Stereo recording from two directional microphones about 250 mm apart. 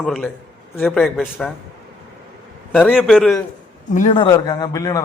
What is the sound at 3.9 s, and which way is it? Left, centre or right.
Speech, left.